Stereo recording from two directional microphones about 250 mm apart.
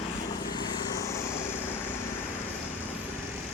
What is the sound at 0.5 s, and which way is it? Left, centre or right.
Vehicle, centre.